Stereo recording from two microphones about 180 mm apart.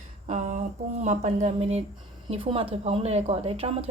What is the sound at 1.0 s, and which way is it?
A woman's voice, 40° right (ahead or behind).